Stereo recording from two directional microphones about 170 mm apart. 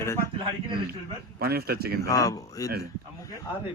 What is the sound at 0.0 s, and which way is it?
Speech, 15° left (ahead or behind).